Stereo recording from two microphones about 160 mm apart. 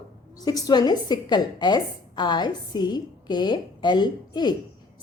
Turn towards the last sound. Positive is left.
turn(degrees=25)  # may be behind; listen again after turning